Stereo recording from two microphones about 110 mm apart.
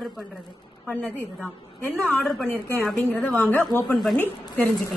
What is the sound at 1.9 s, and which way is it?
Speech, 5° left (ahead or behind).